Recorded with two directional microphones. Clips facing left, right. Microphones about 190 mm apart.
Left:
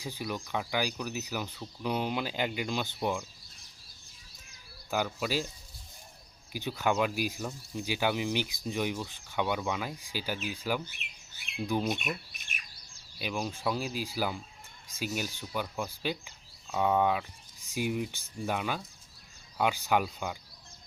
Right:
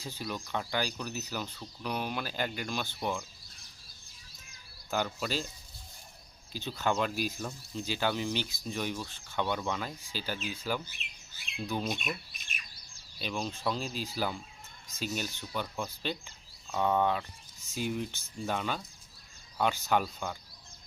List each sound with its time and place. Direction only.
0.0 s speech: 15° left (ahead or behind)
4.9 s speech: 10° left (ahead or behind)
6.5 s speech: 15° left (ahead or behind)
12.4 s bird: 55° left (ahead or behind)
13.1 s speech: 10° left (ahead or behind)